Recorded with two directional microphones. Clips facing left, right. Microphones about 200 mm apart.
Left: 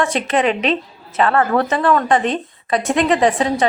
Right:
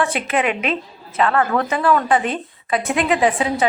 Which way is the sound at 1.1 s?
35° left (ahead or behind).